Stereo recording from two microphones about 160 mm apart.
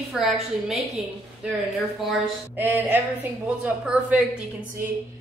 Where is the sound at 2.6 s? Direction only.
10° right (ahead or behind).